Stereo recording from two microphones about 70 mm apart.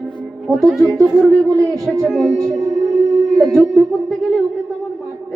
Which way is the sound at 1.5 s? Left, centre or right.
Right.